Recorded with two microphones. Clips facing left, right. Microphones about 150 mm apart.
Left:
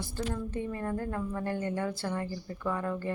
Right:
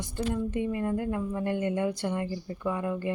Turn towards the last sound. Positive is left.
turn(degrees=-15)  # may be behind; listen again after turning